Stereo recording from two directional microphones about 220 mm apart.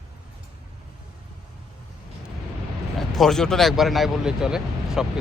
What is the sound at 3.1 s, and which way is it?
Speech, centre (ahead or behind).